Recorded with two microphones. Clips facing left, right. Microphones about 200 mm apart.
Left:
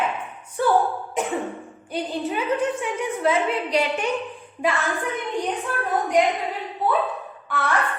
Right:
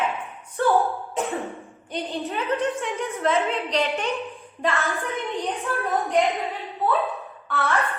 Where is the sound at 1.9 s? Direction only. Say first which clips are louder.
Left 3 dB; centre (ahead or behind).